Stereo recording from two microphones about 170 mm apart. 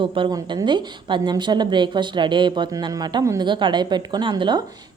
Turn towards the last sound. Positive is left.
turn(degrees=-25)  # may be behind; listen again after turning